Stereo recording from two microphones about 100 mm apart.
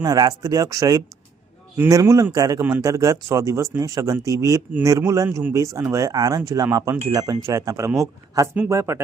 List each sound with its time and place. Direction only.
0.0 s speech: 40° right (ahead or behind)